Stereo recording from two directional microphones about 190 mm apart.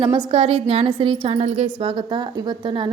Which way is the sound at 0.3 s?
30° right (ahead or behind).